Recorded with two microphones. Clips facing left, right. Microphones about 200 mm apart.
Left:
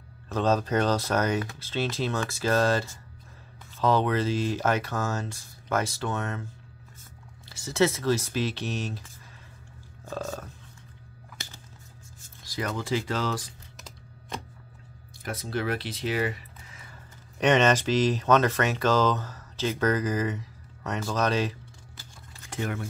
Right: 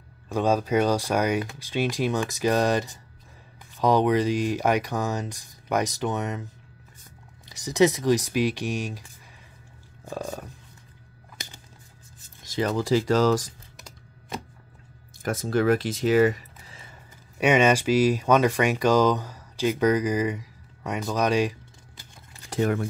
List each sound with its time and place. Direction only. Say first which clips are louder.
0.3 s speech: right 2 dB; 10° right (ahead or behind)
10.0 s a sound: right 1 dB; 15° right (ahead or behind)
12.4 s speech: right 6 dB; 30° right (ahead or behind)
15.2 s speech: right 8 dB; 45° right (ahead or behind)
17.4 s speech: right 2 dB; 10° right (ahead or behind)
22.5 s keys jangling: right 8 dB; 35° right (ahead or behind)